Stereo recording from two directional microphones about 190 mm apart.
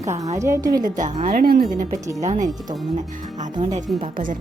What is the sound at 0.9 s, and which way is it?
Speech, 40° right (ahead or behind).